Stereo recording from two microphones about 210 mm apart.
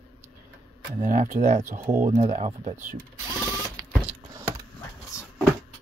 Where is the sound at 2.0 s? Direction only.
30° right (ahead or behind).